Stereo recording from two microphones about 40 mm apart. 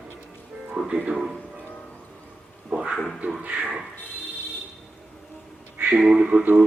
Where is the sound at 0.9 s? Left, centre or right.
Right.